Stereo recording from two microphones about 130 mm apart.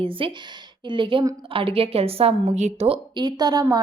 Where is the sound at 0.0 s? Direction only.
45° right (ahead or behind).